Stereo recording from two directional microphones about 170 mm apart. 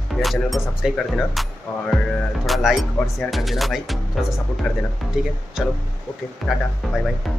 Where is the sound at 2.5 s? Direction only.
Centre (ahead or behind).